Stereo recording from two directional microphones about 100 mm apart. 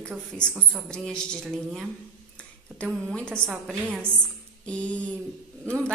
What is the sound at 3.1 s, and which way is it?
Speech, 10° left (ahead or behind).